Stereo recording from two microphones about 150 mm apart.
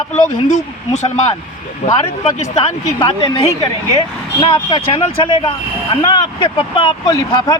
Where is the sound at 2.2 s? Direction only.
35° left (ahead or behind).